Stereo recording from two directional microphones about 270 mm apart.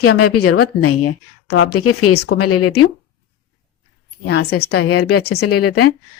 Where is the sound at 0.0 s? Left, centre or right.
Left.